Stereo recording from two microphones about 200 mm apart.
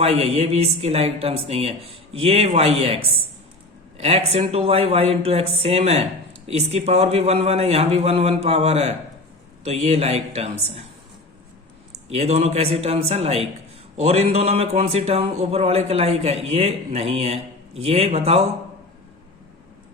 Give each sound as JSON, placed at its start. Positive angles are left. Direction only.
{"t": 0.0, "sound": "speech", "side_deg": -30}
{"t": 12.0, "sound": "speech", "side_deg": -30}